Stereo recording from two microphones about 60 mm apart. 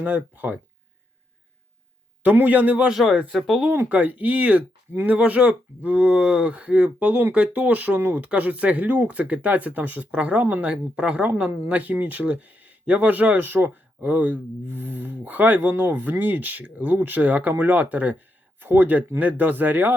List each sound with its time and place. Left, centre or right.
0.0 s speech: right
2.2 s speech: right
2.9 s speech: centre
3.8 s speech: right